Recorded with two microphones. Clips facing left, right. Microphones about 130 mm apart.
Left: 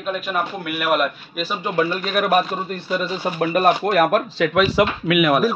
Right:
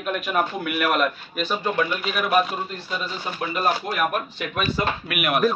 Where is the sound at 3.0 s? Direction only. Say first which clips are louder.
Left 8 dB; 60° left (ahead or behind); by 4.9 s 90° left.